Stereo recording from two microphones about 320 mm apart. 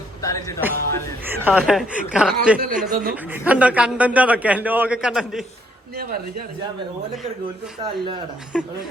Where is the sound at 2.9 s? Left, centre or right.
Right.